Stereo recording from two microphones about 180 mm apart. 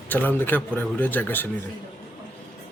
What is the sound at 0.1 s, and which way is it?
A man's voice, 10° left (ahead or behind).